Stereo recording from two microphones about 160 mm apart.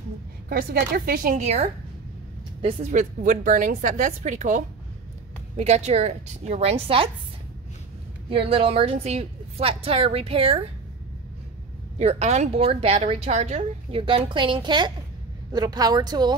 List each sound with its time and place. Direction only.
0.5 s a woman's voice: 70° right (ahead or behind)
1.4 s a woman's voice: 40° right (ahead or behind)
2.8 s a woman's voice: 50° right (ahead or behind); by 7.1 s 35° right (ahead or behind)
8.3 s a woman's voice: 35° right (ahead or behind)
12.0 s a woman's voice: 45° right (ahead or behind); by 16.3 s 25° right (ahead or behind)